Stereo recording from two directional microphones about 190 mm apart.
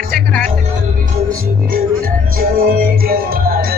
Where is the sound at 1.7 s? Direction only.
50° right (ahead or behind).